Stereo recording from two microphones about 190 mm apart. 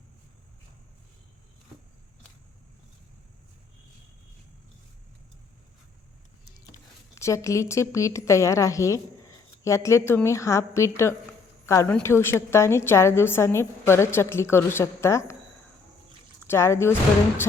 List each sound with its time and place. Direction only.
7.2 s a woman's voice: 15° left (ahead or behind)
16.5 s a woman's voice: 15° left (ahead or behind)